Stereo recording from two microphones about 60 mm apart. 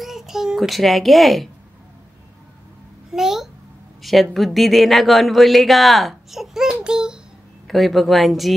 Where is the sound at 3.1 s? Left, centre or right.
Centre.